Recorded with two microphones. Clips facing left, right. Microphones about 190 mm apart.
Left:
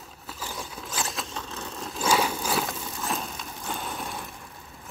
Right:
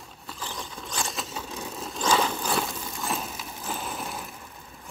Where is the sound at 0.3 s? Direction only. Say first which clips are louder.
Even; 10° left (ahead or behind); by 1.9 s 10° right (ahead or behind).